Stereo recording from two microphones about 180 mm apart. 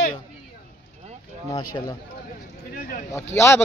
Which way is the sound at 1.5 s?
20° left (ahead or behind).